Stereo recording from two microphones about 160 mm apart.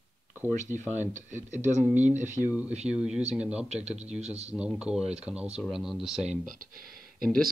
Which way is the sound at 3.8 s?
45° right (ahead or behind).